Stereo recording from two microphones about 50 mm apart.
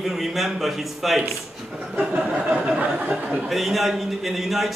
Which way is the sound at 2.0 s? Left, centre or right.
Right.